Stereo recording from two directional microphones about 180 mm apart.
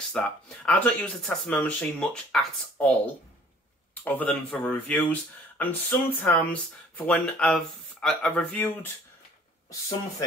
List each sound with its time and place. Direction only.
0.2 s speech: 5° left (ahead or behind)